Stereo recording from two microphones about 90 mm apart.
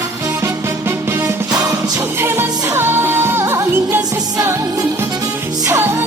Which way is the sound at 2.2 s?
25° right (ahead or behind).